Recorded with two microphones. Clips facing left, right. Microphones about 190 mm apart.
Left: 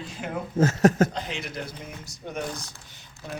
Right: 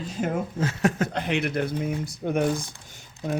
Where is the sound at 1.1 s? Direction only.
60° right (ahead or behind).